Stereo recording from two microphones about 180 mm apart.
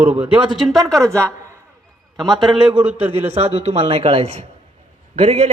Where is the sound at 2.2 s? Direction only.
Centre (ahead or behind).